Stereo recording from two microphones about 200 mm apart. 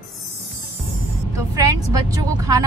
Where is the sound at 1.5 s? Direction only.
15° right (ahead or behind).